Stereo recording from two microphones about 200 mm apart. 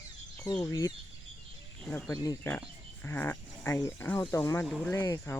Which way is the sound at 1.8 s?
5° left (ahead or behind).